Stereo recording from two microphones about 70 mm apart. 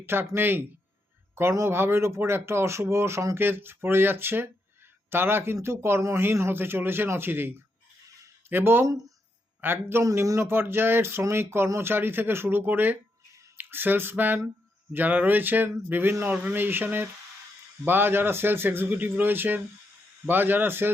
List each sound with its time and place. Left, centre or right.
0.0 s speech: right
3.4 s speech: right
8.8 s speech: right
9.6 s a man's voice: right
10.0 s speech: right